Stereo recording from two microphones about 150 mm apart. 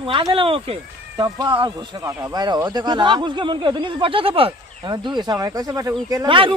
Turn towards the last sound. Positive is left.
turn(degrees=-35)  # may be behind; listen again after turning